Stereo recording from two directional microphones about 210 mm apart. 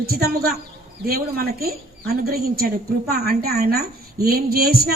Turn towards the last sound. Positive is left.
turn(degrees=-45)  # may be behind; listen again after turning